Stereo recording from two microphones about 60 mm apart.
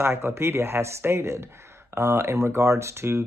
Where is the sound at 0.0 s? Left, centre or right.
Right.